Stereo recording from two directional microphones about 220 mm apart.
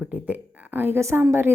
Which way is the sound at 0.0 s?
5° right (ahead or behind).